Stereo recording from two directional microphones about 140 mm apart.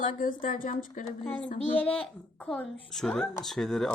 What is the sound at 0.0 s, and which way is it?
Speech, 80° left.